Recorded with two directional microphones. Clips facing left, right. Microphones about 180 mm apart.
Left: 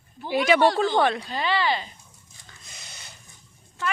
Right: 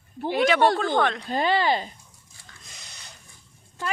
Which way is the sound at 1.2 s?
45° right (ahead or behind).